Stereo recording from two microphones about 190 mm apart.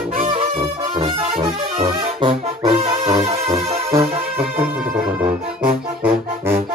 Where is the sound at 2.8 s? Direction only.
20° right (ahead or behind).